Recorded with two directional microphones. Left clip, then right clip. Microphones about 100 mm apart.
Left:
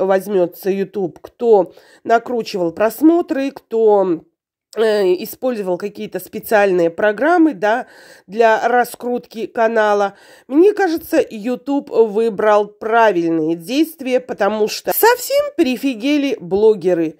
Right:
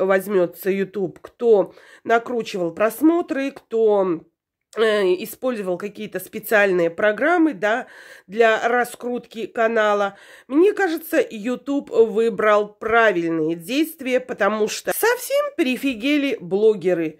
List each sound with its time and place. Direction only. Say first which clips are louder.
0.0 s speech: left 3 dB; 30° left (ahead or behind)
15.4 s speech: left 4 dB; 45° left (ahead or behind)